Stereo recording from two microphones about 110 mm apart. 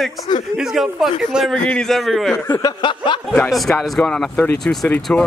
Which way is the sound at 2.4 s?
30° left (ahead or behind).